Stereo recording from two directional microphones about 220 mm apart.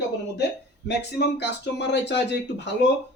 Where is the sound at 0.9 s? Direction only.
50° left (ahead or behind).